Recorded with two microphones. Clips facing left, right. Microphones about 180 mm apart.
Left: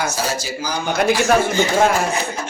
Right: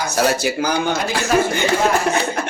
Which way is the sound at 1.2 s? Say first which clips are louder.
Left 1 dB; 60° right (ahead or behind).